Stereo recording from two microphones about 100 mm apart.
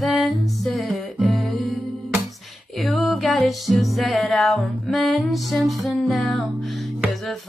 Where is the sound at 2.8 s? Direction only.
Centre (ahead or behind).